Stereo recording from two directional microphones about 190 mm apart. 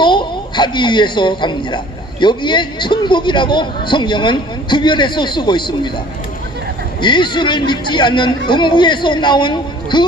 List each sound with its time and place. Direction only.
0.0 s a man's voice: 25° left (ahead or behind)
7.0 s a man's voice: 25° left (ahead or behind)